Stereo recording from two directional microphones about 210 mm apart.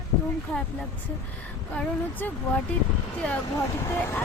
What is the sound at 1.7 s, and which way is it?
Speech, 5° left (ahead or behind).